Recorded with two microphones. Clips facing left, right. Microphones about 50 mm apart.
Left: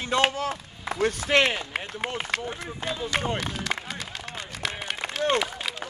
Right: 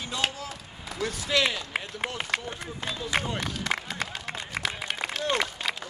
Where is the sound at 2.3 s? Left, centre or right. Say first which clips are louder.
Left 1 dB; centre.